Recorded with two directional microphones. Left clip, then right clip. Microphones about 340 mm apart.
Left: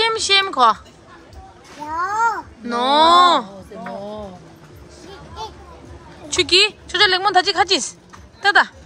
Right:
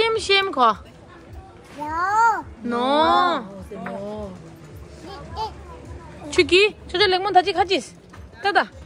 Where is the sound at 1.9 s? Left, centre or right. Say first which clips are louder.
Right 1 dB; centre.